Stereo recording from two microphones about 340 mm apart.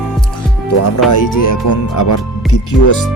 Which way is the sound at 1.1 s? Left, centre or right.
Left.